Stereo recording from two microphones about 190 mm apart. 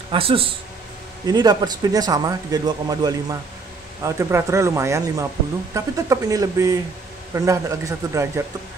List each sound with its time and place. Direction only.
0.1 s speech: 30° right (ahead or behind)